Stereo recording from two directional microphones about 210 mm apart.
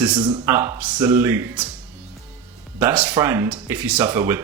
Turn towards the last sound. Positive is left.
turn(degrees=-10)  # may be behind; listen again after turning